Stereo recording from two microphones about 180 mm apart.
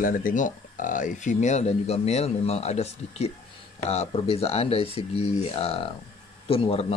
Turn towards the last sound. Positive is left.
turn(degrees=30)  # may be behind; listen again after turning